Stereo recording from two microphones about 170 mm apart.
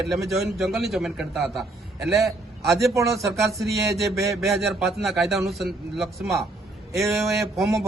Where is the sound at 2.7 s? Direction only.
20° right (ahead or behind).